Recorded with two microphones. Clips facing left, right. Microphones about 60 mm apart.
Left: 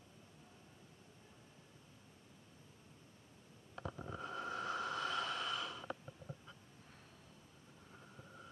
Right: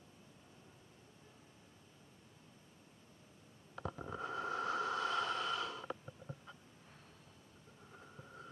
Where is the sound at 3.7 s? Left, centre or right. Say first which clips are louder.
Right 3 dB; centre.